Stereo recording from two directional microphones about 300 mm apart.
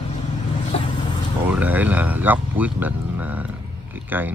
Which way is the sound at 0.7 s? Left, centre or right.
Centre.